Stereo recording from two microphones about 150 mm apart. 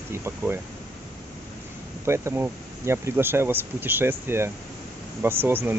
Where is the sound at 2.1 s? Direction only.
15° right (ahead or behind).